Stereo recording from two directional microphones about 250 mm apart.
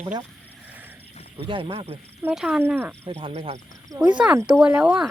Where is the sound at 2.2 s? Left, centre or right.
Centre.